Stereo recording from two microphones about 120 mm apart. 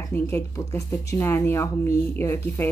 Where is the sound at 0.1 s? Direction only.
20° left (ahead or behind).